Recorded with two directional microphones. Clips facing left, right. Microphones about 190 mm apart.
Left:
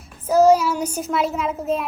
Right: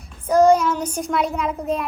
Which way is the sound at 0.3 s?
5° left (ahead or behind).